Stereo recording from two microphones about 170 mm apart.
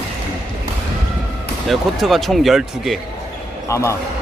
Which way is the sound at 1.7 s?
Centre (ahead or behind).